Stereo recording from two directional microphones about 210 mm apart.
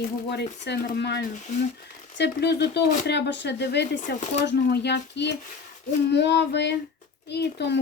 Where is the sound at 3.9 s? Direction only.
35° left (ahead or behind).